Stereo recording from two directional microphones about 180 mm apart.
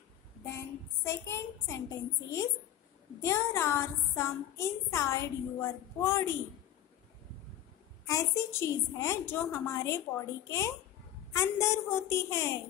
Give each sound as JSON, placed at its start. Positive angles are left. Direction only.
{"t": 1.0, "sound": "a woman's voice", "side_deg": 15}
{"t": 8.1, "sound": "a woman's voice", "side_deg": 15}